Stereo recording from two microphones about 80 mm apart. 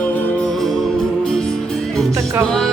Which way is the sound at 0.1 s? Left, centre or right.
Left.